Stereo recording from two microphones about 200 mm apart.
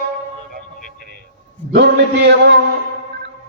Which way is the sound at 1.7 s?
55° right (ahead or behind).